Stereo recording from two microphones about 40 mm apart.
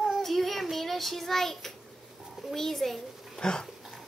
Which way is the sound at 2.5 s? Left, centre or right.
Centre.